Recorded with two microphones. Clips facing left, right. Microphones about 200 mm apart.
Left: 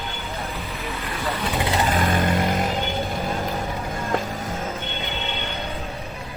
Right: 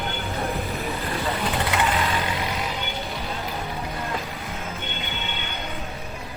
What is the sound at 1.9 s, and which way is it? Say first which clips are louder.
Vehicle: left 4 dB; 50° left (ahead or behind).